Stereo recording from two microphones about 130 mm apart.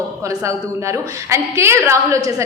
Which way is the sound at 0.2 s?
25° right (ahead or behind).